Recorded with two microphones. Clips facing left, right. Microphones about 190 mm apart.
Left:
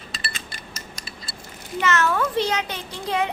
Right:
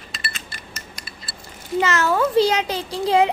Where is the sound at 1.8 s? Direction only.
30° right (ahead or behind).